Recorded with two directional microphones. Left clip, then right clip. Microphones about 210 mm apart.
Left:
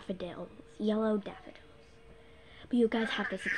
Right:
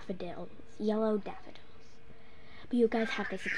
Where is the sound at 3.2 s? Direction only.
25° left (ahead or behind).